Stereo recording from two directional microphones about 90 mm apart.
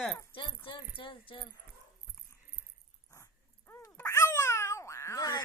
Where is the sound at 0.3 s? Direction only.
70° left (ahead or behind).